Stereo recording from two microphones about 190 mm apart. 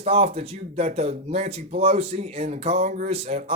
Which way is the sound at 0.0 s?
30° right (ahead or behind).